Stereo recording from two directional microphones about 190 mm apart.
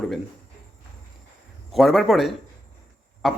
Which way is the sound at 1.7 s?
Centre (ahead or behind).